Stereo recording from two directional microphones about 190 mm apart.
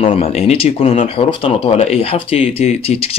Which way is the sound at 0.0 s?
30° left (ahead or behind).